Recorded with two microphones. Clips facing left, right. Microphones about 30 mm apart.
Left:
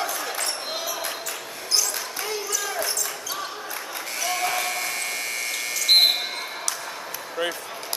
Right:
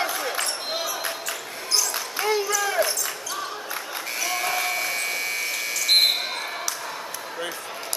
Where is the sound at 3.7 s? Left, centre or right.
Centre.